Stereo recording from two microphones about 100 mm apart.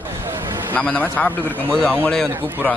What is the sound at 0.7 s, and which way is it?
Speech, 15° left (ahead or behind).